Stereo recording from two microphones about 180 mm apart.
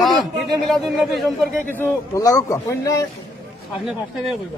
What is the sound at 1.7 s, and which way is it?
A man's voice, 15° left (ahead or behind).